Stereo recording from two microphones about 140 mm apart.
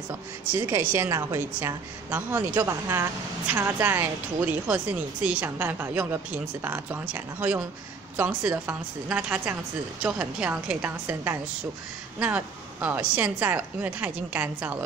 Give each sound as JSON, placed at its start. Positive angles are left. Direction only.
{"t": 0.1, "sound": "a woman's voice", "side_deg": -15}